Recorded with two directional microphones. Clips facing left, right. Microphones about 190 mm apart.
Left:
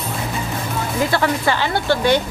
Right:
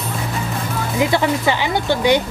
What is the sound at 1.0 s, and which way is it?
Speech, 15° right (ahead or behind).